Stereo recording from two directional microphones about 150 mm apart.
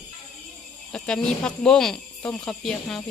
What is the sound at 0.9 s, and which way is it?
Speech, 5° left (ahead or behind).